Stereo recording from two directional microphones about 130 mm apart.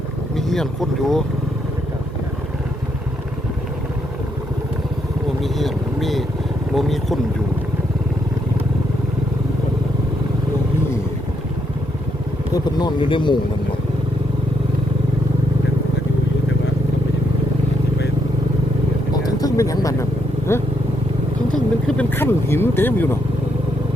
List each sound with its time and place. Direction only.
0.3 s speech: centre (ahead or behind)
5.4 s speech: centre (ahead or behind)
12.5 s speech: 35° left (ahead or behind)
19.1 s a sound: 25° left (ahead or behind)
20.5 s speech: 20° left (ahead or behind)
21.8 s speech: 10° left (ahead or behind)